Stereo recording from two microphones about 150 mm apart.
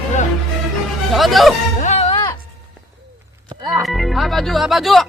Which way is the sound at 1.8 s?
50° left (ahead or behind).